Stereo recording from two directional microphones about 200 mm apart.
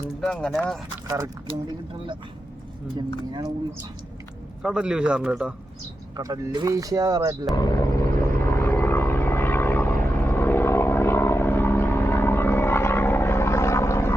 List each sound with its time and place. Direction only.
0.2 s a man's voice: 5° left (ahead or behind)
1.0 s speech: 20° right (ahead or behind)
4.6 s a man's voice: 5° right (ahead or behind)
6.1 s speech: 20° right (ahead or behind)
7.5 s a sound: 15° left (ahead or behind)